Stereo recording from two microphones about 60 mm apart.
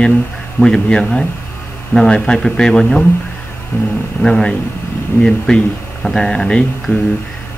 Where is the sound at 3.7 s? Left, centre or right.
Left.